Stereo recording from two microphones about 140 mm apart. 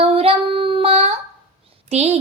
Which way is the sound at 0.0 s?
45° right (ahead or behind).